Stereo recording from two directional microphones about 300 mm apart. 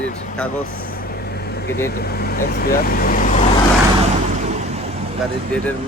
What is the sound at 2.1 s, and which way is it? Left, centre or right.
Speech, left.